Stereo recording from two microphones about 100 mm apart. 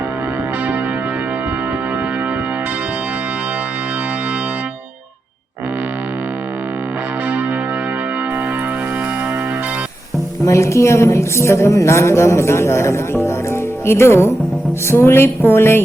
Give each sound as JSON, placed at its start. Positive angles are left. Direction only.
{"t": 10.4, "sound": "a woman's voice", "side_deg": 30}